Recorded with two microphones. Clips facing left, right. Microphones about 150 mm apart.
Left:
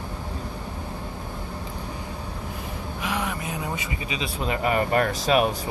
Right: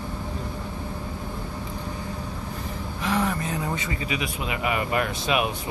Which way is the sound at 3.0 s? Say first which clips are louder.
Right 4 dB; 5° left (ahead or behind).